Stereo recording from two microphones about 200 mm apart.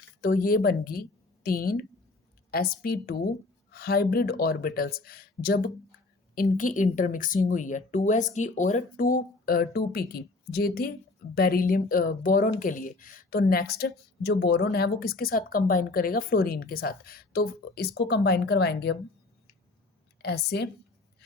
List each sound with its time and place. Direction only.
0.2 s speech: 45° left (ahead or behind)
20.2 s a woman's voice: 55° left (ahead or behind)